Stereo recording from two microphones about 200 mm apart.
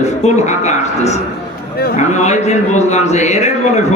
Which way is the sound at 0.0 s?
35° left (ahead or behind).